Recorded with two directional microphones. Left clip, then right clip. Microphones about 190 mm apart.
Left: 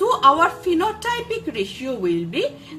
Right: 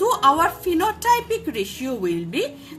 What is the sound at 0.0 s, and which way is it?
A woman's voice, 15° right (ahead or behind).